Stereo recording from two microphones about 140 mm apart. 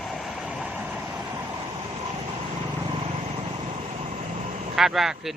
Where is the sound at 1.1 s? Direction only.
20° right (ahead or behind).